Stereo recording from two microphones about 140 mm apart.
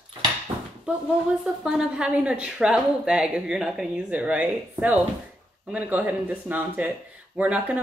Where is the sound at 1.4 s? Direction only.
5° right (ahead or behind).